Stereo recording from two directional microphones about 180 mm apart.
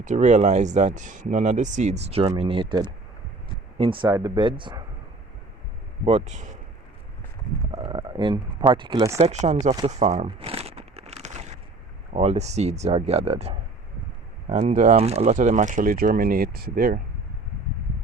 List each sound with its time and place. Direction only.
0.0 s speech: 40° right (ahead or behind); by 4.7 s 25° right (ahead or behind)
6.1 s speech: 40° right (ahead or behind)
7.7 s a sound: 30° right (ahead or behind)
8.7 s speech: 25° right (ahead or behind)
9.2 s speech: 40° right (ahead or behind)
9.7 s crumpling: 35° right (ahead or behind)
12.1 s speech: 35° right (ahead or behind); by 17.0 s 55° right (ahead or behind)